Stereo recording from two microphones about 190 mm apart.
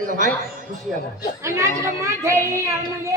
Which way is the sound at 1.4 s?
15° right (ahead or behind).